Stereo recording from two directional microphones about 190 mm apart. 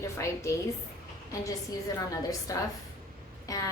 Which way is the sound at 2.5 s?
20° left (ahead or behind).